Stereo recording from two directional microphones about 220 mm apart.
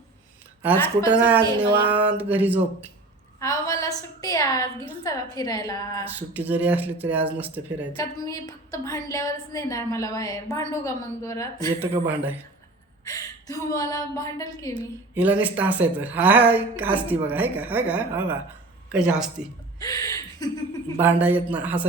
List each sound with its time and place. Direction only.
1.2 s speech: 10° right (ahead or behind)
3.4 s a woman's voice: 15° left (ahead or behind)
6.1 s speech: 10° right (ahead or behind)
7.9 s a woman's voice: 15° left (ahead or behind)
11.8 s speech: 10° right (ahead or behind)
13.1 s a woman's voice: 15° left (ahead or behind)
15.1 s speech: 5° right (ahead or behind)
19.8 s speech: 15° left (ahead or behind)
21.0 s speech: 10° right (ahead or behind)